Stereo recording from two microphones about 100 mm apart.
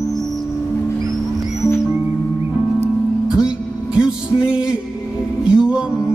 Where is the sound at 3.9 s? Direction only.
10° right (ahead or behind).